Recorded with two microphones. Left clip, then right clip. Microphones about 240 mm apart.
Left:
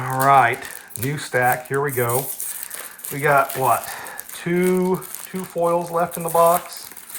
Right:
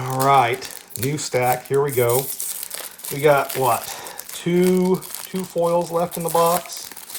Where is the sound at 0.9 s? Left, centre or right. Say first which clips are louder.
Even; right.